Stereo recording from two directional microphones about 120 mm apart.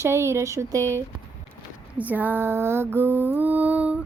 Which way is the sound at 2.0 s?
15° right (ahead or behind).